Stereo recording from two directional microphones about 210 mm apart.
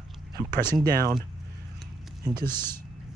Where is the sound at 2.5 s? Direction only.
10° left (ahead or behind).